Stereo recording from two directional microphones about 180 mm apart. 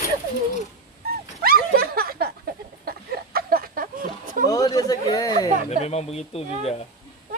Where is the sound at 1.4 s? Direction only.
55° right (ahead or behind).